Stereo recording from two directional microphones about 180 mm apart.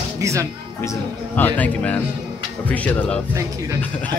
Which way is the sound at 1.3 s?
10° left (ahead or behind).